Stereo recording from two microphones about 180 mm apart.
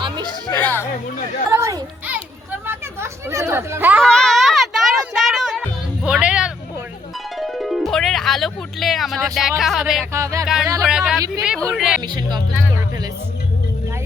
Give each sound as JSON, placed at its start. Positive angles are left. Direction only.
{"t": 0.6, "sound": "speech", "side_deg": 10}
{"t": 1.5, "sound": "children playing", "side_deg": -15}
{"t": 4.0, "sound": "a sound", "side_deg": 5}
{"t": 5.1, "sound": "music", "side_deg": 0}
{"t": 7.3, "sound": "speech", "side_deg": 0}
{"t": 10.1, "sound": "music", "side_deg": -15}
{"t": 10.4, "sound": "speech", "side_deg": -5}
{"t": 12.0, "sound": "speech", "side_deg": -25}